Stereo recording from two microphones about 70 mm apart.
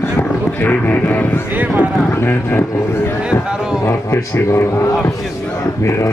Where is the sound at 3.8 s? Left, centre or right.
Left.